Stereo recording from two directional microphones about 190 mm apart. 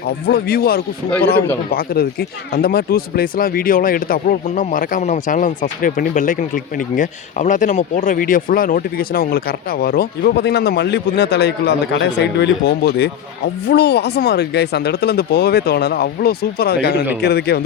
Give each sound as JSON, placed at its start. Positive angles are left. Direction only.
{"t": 0.3, "sound": "speech", "side_deg": 55}